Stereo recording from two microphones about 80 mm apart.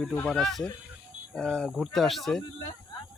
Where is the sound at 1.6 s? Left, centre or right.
Centre.